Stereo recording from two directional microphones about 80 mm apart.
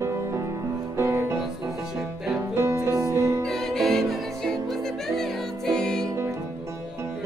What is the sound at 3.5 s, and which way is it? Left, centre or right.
Music, centre.